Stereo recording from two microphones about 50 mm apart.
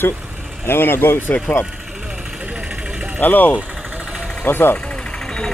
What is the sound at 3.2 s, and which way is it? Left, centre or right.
Speech, left.